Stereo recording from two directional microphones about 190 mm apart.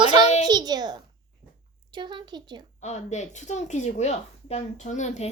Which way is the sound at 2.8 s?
35° left (ahead or behind).